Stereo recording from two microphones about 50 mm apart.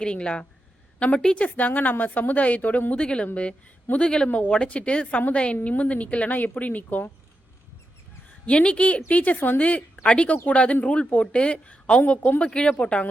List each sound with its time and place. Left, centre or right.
0.0 s a woman's voice: centre
3.0 s a woman's voice: centre
8.4 s a woman's voice: left
12.5 s a woman's voice: centre